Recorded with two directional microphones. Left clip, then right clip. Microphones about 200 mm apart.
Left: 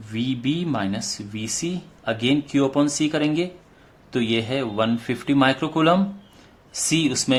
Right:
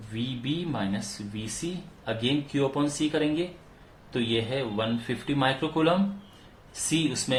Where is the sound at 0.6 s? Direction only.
50° left (ahead or behind).